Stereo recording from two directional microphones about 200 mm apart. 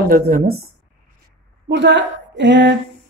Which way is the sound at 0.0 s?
50° right (ahead or behind).